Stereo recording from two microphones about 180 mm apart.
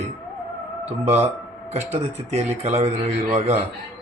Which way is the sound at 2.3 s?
35° right (ahead or behind).